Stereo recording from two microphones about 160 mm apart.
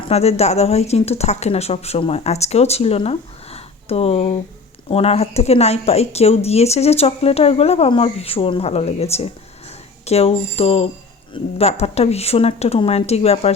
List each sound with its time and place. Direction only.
0.1 s speech: 40° left (ahead or behind)